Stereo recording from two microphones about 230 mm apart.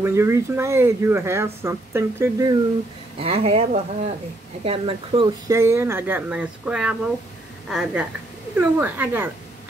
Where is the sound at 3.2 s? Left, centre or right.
Right.